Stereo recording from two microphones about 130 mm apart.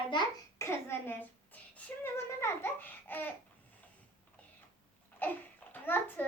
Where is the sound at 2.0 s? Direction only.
20° left (ahead or behind).